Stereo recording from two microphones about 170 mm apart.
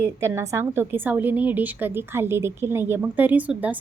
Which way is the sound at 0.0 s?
15° right (ahead or behind).